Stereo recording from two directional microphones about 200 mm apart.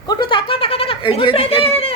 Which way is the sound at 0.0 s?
20° left (ahead or behind).